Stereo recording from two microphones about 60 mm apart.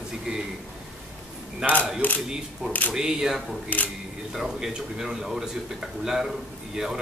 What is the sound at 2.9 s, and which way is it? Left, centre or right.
Speech, centre.